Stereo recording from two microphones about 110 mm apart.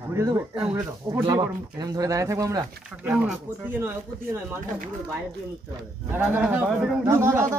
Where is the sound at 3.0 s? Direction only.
15° right (ahead or behind).